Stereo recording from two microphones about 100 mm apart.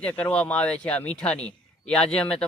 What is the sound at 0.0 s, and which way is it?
Speech, 15° left (ahead or behind).